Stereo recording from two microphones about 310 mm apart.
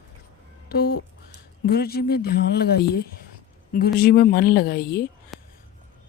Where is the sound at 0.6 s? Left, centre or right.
Left.